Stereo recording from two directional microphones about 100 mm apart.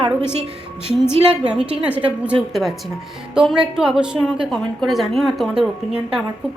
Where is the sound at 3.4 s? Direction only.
5° right (ahead or behind).